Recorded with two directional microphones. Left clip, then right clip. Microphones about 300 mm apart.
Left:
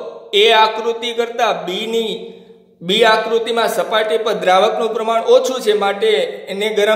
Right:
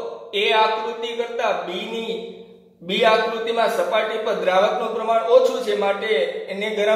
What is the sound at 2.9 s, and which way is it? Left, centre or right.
A man's voice, left.